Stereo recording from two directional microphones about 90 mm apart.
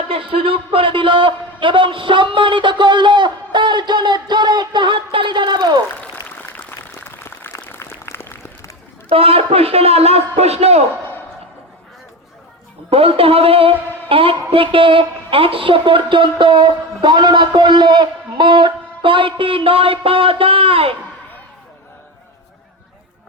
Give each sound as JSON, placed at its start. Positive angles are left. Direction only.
{"t": 0.1, "sound": "a man's voice", "side_deg": -85}
{"t": 6.2, "sound": "a sound", "side_deg": 20}
{"t": 9.0, "sound": "a man's voice", "side_deg": -90}
{"t": 12.9, "sound": "a woman's voice", "side_deg": -90}